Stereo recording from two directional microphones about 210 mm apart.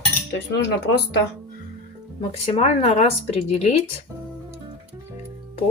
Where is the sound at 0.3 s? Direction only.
55° left (ahead or behind).